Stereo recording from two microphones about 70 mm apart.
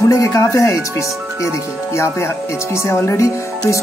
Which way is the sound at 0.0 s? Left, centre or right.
Left.